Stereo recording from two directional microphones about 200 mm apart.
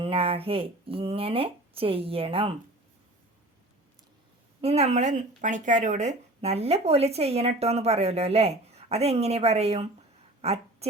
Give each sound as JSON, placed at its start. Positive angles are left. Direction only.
{"t": 0.0, "sound": "speech", "side_deg": -30}
{"t": 4.6, "sound": "speech", "side_deg": -30}